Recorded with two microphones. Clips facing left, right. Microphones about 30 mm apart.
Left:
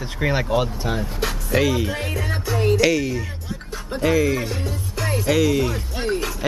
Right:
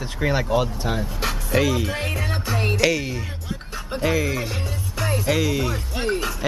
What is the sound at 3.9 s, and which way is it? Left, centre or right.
Speech, centre.